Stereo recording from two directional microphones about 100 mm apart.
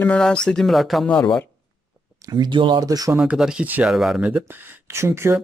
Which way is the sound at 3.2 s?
10° right (ahead or behind).